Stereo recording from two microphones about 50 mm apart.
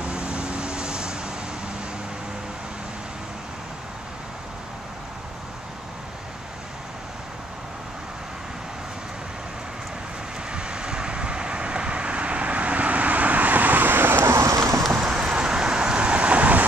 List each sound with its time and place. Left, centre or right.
0.0 s vehicle: centre
10.5 s vehicle: centre; by 14.4 s right
14.4 s horse: right
15.0 s vehicle: centre